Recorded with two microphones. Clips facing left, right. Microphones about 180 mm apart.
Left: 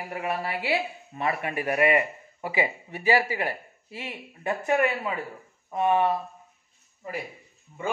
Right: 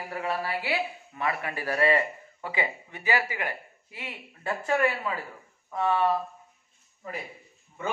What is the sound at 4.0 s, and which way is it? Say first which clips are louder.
Speech: left 3 dB; 20° left (ahead or behind).